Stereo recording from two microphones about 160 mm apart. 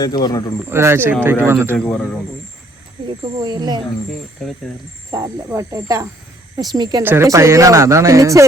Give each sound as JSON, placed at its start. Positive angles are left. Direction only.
{"t": 0.0, "sound": "speech", "side_deg": 25}
{"t": 0.7, "sound": "speech", "side_deg": -15}
{"t": 1.7, "sound": "a man's voice", "side_deg": 5}
{"t": 3.3, "sound": "speech", "side_deg": -25}
{"t": 4.4, "sound": "speech", "side_deg": 0}
{"t": 5.1, "sound": "speech", "side_deg": -20}
{"t": 7.0, "sound": "speech", "side_deg": -15}